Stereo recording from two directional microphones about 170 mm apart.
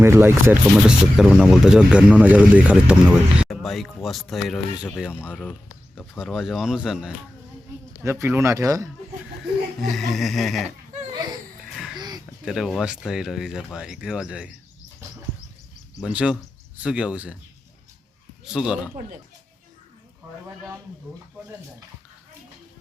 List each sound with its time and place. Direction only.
0.0 s speech: 15° right (ahead or behind)
5.2 s speech: 5° left (ahead or behind)
8.0 s speech: 15° right (ahead or behind)
9.9 s speech: centre (ahead or behind)
11.9 s a sound: 25° right (ahead or behind)
12.5 s speech: centre (ahead or behind)
16.0 s speech: 5° right (ahead or behind)
18.4 s speech: 5° right (ahead or behind)